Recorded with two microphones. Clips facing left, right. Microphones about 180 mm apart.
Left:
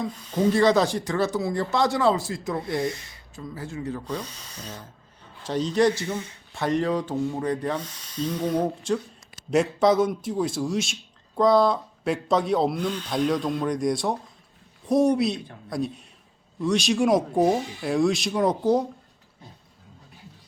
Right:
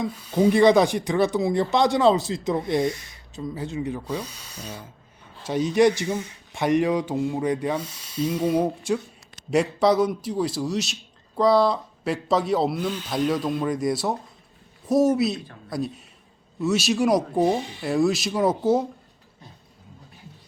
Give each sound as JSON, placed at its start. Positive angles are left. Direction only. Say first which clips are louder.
{"t": 0.3, "sound": "speech", "louder": "right 3 dB", "side_deg": -10}
{"t": 9.3, "sound": "a sound", "louder": "even", "side_deg": 0}
{"t": 9.8, "sound": "speech", "louder": "right 1 dB", "side_deg": 0}